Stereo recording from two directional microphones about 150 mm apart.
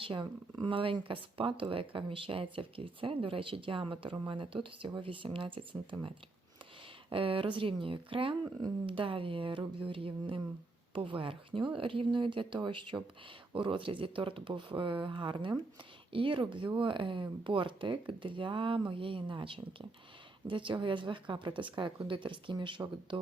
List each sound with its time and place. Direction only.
0.0 s speech: 35° right (ahead or behind)